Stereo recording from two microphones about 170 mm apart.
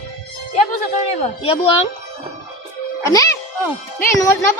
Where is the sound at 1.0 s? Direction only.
35° left (ahead or behind).